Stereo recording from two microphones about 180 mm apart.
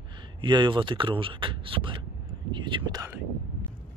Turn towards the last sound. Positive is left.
turn(degrees=-20)  # may be behind; listen again after turning